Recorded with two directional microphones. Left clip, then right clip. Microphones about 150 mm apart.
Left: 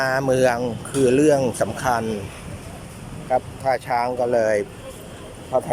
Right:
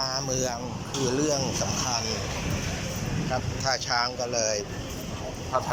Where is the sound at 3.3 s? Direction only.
45° left (ahead or behind).